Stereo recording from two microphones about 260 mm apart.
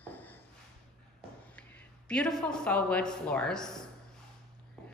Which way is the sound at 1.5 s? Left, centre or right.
Centre.